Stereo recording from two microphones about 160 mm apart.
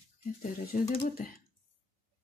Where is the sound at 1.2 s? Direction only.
60° left (ahead or behind).